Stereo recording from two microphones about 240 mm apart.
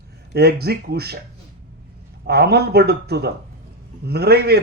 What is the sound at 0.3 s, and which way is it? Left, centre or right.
Speech, right.